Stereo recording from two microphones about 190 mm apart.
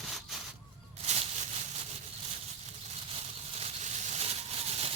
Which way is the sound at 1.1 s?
35° right (ahead or behind).